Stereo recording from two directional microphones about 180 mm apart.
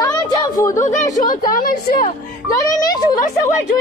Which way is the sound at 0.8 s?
40° left (ahead or behind).